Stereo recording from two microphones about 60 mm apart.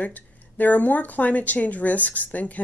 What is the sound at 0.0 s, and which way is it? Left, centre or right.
Speech, left.